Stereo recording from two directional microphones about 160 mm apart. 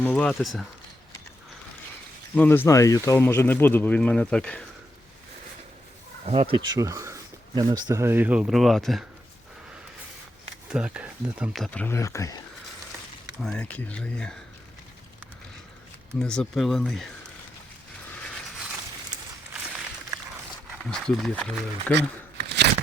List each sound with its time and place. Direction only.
0.0 s speech: 10° left (ahead or behind)
2.3 s speech: 10° left (ahead or behind)
6.2 s speech: 40° right (ahead or behind)
6.7 s speech: 20° right (ahead or behind); by 9.0 s centre (ahead or behind)
10.7 s speech: 5° right (ahead or behind)
11.5 s speech: 5° left (ahead or behind)
13.4 s speech: 10° left (ahead or behind)
16.1 s speech: 5° left (ahead or behind)
20.8 s speech: 5° left (ahead or behind)
22.4 s a sound: 90° right